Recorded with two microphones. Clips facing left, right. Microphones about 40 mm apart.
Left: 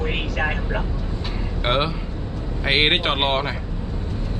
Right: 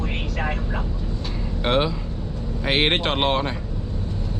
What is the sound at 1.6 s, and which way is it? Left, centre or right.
Speech, centre.